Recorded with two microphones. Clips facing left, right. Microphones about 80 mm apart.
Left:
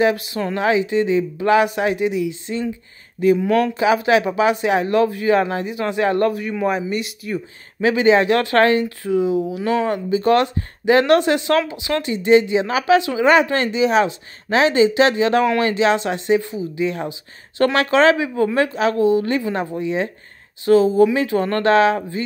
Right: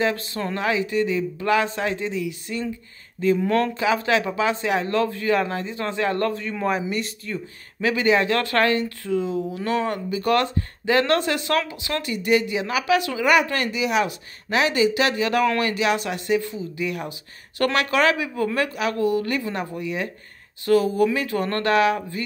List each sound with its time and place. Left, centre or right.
0.0 s speech: centre
3.3 s speech: centre
6.5 s speech: centre; by 22.2 s left